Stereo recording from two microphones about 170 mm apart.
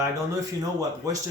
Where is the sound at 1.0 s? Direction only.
20° right (ahead or behind).